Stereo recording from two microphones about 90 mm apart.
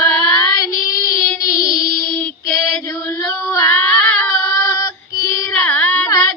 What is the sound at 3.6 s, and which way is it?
Child singing, 10° left (ahead or behind).